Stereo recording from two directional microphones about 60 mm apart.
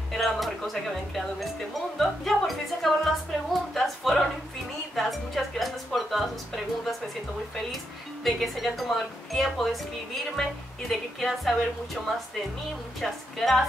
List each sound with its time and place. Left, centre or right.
0.1 s speech: centre
3.7 s a sound: centre
4.9 s music: centre
5.9 s a woman's voice: centre
13.0 s a woman's voice: centre